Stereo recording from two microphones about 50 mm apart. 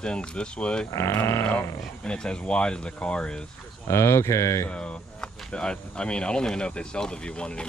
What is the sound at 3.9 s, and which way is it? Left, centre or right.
Speech, left.